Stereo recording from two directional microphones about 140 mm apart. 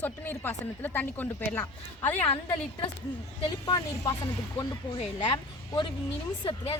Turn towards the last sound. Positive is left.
turn(degrees=40)  # may be behind; listen again after turning